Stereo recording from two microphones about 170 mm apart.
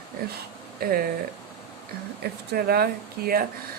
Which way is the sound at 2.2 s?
70° right (ahead or behind).